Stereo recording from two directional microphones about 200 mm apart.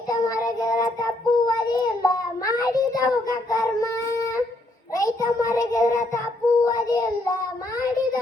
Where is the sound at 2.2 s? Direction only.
20° left (ahead or behind).